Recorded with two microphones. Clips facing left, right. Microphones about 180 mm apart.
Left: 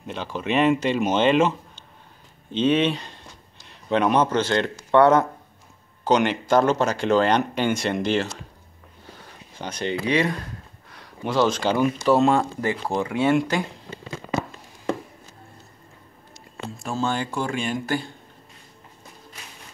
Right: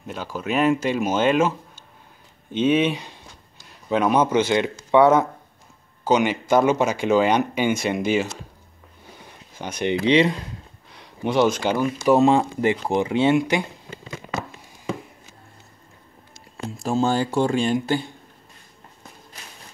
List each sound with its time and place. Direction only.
0.0 s speech: 5° right (ahead or behind)
2.5 s speech: 10° right (ahead or behind)
9.6 s speech: 10° right (ahead or behind)
10.0 s speech: 20° right (ahead or behind)
17.0 s speech: 35° right (ahead or behind)
17.7 s speech: 20° right (ahead or behind)